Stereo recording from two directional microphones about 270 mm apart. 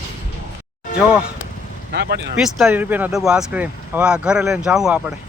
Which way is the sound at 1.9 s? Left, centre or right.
Right.